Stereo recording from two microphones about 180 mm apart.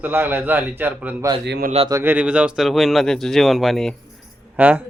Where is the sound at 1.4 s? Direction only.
70° right (ahead or behind).